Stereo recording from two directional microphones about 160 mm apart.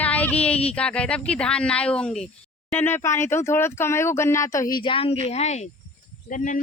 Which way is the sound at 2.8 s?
15° left (ahead or behind).